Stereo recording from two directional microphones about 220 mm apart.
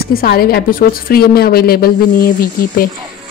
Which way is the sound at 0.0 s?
45° left (ahead or behind).